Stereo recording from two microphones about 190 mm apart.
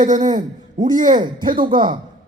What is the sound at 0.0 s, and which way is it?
A man's voice, 40° right (ahead or behind).